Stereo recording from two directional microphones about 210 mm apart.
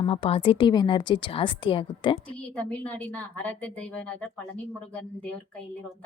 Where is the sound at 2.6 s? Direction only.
5° left (ahead or behind).